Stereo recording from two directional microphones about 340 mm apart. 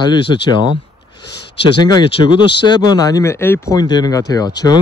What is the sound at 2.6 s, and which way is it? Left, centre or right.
Speech, centre.